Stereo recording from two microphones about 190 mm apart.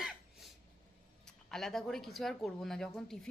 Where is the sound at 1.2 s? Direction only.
Centre (ahead or behind).